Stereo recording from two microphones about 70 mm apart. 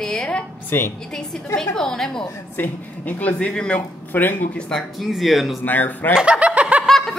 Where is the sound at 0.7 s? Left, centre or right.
Left.